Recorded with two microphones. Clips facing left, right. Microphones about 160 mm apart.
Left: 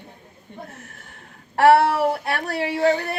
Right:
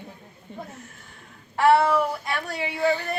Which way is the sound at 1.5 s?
70° left (ahead or behind).